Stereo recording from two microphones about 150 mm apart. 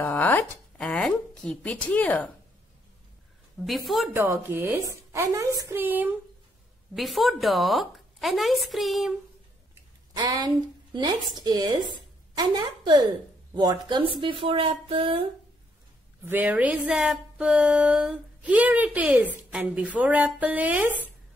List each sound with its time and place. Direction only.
0.0 s speech: 10° left (ahead or behind)
3.6 s a woman's voice: centre (ahead or behind)
4.1 s speech: 15° right (ahead or behind)
7.0 s a woman's voice: centre (ahead or behind)
10.1 s a woman's voice: 25° right (ahead or behind)
16.3 s speech: 10° right (ahead or behind)